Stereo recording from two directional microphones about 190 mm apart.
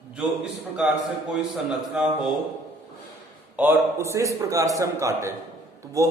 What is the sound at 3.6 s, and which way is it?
A man's voice, 10° right (ahead or behind).